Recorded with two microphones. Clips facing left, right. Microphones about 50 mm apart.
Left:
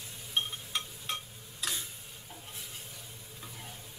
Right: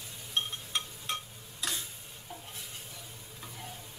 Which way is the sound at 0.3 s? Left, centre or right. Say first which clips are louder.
Even; centre.